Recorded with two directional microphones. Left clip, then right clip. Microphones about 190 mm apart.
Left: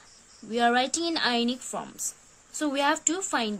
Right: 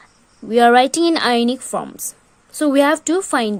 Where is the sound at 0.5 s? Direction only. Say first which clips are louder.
Right 12 dB; 45° right (ahead or behind).